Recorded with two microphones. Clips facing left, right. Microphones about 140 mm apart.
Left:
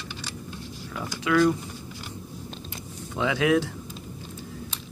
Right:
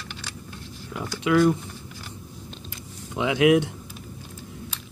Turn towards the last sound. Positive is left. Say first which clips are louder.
# right 4 dB
turn(degrees=-15)  # may be behind; listen again after turning